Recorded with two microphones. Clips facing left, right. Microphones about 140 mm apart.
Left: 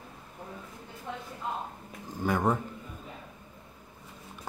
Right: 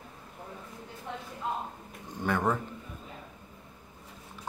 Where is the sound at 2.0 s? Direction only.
5° left (ahead or behind).